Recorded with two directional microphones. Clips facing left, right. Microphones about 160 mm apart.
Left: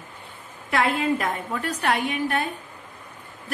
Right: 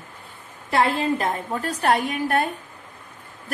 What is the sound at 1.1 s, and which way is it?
Speech, 30° right (ahead or behind).